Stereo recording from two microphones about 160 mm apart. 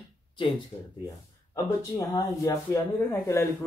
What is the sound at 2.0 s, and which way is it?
Speech, 25° left (ahead or behind).